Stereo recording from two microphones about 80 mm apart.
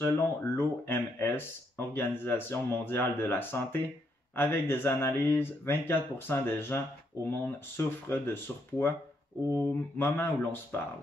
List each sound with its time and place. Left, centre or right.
0.0 s speech: left